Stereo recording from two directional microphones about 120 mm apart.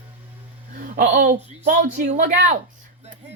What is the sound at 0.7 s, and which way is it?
A woman's voice, 90° right.